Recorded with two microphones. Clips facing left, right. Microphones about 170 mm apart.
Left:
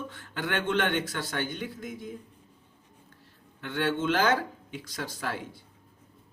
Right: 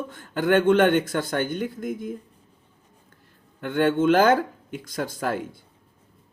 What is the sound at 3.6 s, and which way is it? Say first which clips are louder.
Speech: right 8 dB; 50° right (ahead or behind).